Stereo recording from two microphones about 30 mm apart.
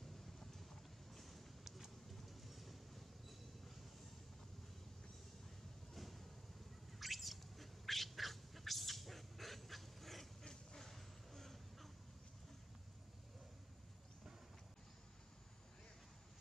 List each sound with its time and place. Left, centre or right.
0.2 s vehicle: centre
2.0 s train: centre
5.9 s a sound: centre
7.0 s bird: centre
10.4 s dog: left
10.8 s a sound: centre